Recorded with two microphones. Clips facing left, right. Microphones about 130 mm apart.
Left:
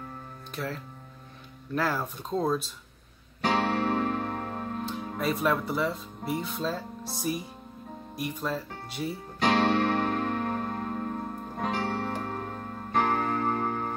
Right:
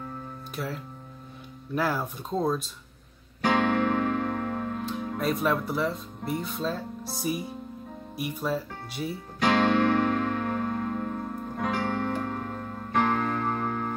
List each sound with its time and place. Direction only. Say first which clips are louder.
0.6 s speech: even; centre (ahead or behind)
1.8 s speech: right 1 dB; centre (ahead or behind)
3.8 s music: right 2 dB; 40° left (ahead or behind)
4.8 s speech: right 1 dB; centre (ahead or behind)
9.5 s music: right 2 dB; 50° right (ahead or behind)
9.8 s music: right 3 dB; 50° left (ahead or behind)